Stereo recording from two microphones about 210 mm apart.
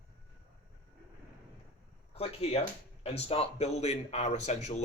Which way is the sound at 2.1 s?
30° left (ahead or behind).